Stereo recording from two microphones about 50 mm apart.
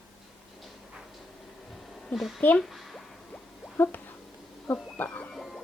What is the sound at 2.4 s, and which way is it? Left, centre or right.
Speech, left.